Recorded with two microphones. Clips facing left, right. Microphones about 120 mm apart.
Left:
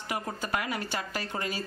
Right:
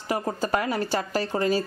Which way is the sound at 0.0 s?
35° right (ahead or behind).